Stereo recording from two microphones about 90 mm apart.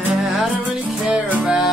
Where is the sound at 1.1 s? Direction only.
15° right (ahead or behind).